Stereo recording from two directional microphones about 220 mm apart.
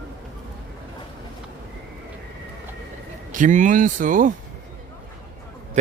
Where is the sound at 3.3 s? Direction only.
35° right (ahead or behind).